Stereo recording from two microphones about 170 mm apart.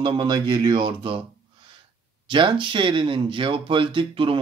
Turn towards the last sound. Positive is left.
turn(degrees=-30)  # may be behind; listen again after turning